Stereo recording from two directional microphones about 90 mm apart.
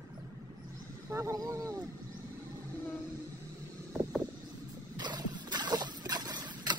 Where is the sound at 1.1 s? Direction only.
35° right (ahead or behind).